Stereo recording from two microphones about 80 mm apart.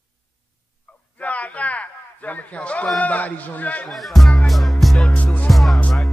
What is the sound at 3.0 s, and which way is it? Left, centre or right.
Speech, centre.